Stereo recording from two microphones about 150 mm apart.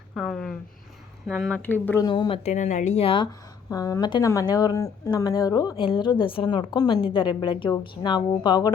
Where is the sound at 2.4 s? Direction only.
55° left (ahead or behind); by 3.3 s 35° left (ahead or behind).